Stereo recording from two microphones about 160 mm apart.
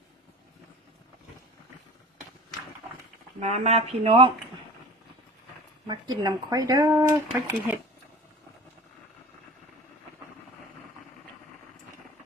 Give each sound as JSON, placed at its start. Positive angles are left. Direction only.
{"t": 3.4, "sound": "speech", "side_deg": -45}
{"t": 5.9, "sound": "speech", "side_deg": -25}
{"t": 6.9, "sound": "speech", "side_deg": -10}